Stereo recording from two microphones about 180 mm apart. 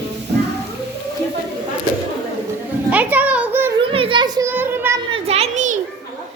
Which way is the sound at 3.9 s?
30° right (ahead or behind).